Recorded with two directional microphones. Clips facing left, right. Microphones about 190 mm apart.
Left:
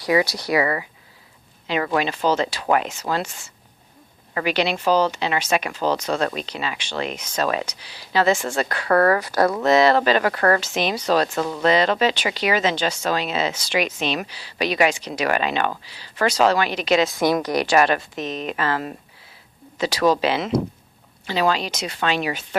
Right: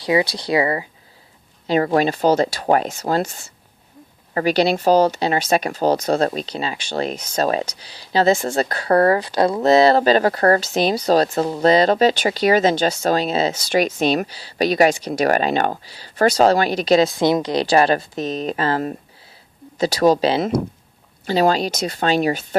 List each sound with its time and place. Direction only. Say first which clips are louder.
0.0 s speech: right 1 dB; 25° right (ahead or behind); by 22.4 s 40° right (ahead or behind)